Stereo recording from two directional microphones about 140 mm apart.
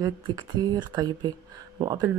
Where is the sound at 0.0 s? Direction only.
30° right (ahead or behind).